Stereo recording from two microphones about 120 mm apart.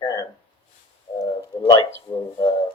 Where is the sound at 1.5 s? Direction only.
35° left (ahead or behind).